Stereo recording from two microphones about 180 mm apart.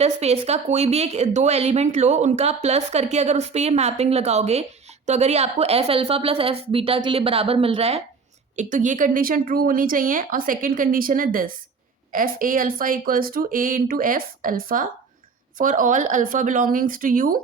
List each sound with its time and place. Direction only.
0.0 s a woman's voice: 35° right (ahead or behind)